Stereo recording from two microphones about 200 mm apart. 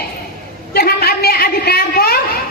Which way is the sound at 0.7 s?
50° left (ahead or behind).